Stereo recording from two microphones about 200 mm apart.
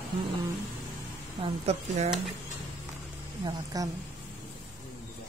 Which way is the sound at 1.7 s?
30° right (ahead or behind).